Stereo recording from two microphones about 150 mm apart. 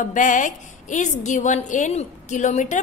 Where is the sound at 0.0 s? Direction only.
60° left (ahead or behind).